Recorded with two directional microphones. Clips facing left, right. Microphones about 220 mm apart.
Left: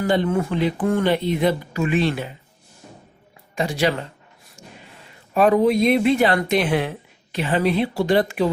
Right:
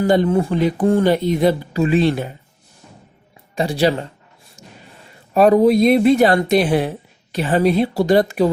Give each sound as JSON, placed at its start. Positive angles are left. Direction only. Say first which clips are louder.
{"t": 0.1, "sound": "speech", "louder": "right 3 dB", "side_deg": -40}
{"t": 3.5, "sound": "speech", "louder": "right 4 dB", "side_deg": -35}
{"t": 5.3, "sound": "speech", "louder": "right 4 dB", "side_deg": -35}